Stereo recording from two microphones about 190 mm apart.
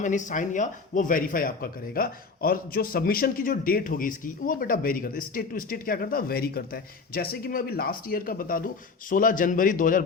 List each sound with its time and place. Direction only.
0.0 s speech: 40° left (ahead or behind)